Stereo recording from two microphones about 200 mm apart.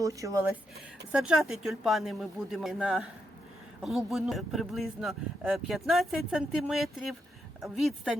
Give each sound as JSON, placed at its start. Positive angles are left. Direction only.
{"t": 0.0, "sound": "speech", "side_deg": -15}
{"t": 1.1, "sound": "speech", "side_deg": -5}